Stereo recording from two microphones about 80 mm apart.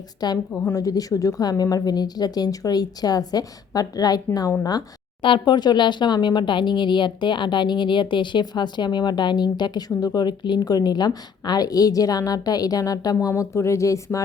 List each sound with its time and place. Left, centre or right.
0.2 s a woman's voice: left
5.2 s a woman's voice: left
13.1 s speech: left